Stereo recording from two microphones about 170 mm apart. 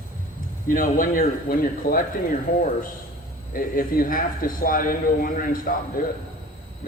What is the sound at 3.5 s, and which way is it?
A man's voice, 55° left (ahead or behind).